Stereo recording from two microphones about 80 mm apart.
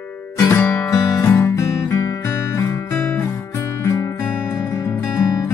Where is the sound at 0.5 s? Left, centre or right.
Left.